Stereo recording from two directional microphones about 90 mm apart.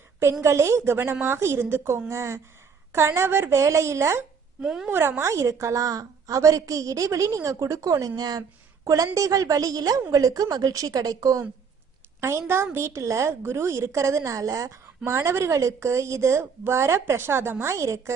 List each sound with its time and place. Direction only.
0.4 s a woman's voice: 30° right (ahead or behind)
4.6 s a woman's voice: 5° right (ahead or behind)
4.9 s a woman's voice: 25° right (ahead or behind)